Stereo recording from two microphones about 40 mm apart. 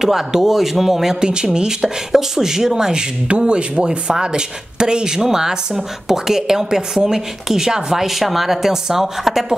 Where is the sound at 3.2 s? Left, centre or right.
Right; by 9.6 s centre.